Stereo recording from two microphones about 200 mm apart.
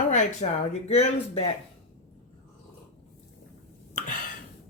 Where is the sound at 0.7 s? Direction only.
30° left (ahead or behind).